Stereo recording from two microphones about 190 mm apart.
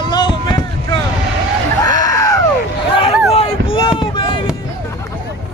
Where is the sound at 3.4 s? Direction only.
30° left (ahead or behind).